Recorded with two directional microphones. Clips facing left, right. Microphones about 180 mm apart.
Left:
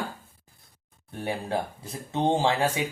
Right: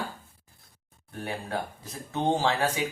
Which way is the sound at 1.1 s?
25° left (ahead or behind).